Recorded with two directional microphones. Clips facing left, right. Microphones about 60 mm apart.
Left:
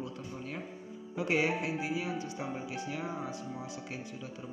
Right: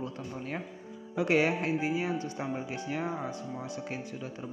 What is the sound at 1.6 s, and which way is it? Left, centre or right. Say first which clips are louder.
Speech: right 4 dB; right.